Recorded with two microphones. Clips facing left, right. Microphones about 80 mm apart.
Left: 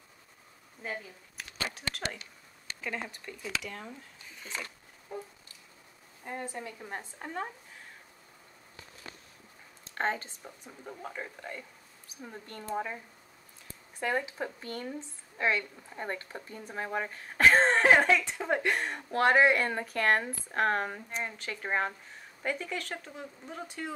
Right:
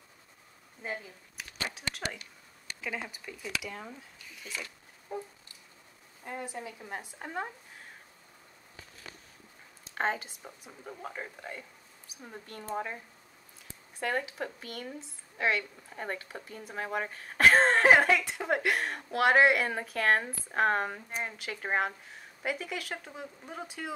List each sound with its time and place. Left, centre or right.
0.8 s a sound: centre
2.8 s speech: centre
4.4 s speech: left
6.4 s a woman's voice: centre
9.9 s speech: centre
10.9 s a woman's voice: centre